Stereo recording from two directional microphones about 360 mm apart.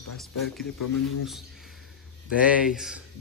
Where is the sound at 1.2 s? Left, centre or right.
Centre.